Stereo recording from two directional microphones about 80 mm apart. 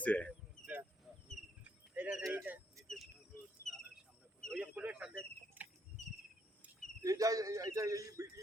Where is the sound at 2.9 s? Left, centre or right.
Centre.